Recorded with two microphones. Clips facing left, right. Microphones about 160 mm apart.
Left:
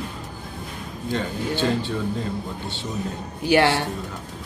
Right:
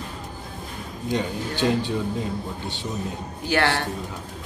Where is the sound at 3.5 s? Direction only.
15° left (ahead or behind).